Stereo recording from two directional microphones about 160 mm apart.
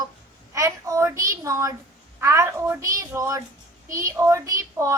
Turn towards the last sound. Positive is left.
turn(degrees=-20)  # may be behind; listen again after turning